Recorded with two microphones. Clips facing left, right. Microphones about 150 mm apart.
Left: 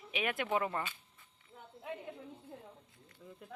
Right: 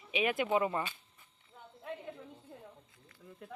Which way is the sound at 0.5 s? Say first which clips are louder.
Right 2 dB; 10° right (ahead or behind).